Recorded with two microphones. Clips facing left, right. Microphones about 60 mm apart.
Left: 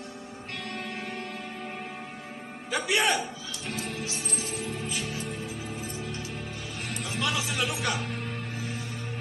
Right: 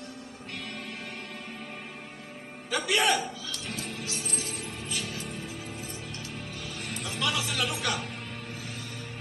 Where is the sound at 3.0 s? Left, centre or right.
Centre.